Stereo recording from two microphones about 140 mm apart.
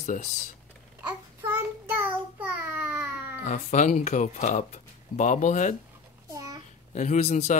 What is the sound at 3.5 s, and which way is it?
Speech, 60° left (ahead or behind).